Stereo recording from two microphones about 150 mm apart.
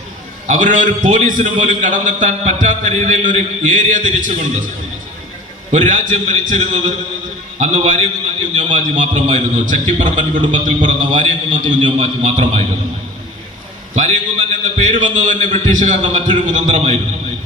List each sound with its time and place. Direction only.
0.4 s a man's voice: 55° right (ahead or behind)
5.7 s a man's voice: 55° right (ahead or behind)
13.9 s a man's voice: 55° right (ahead or behind)